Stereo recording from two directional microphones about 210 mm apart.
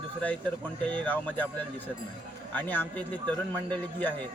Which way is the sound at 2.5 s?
10° left (ahead or behind).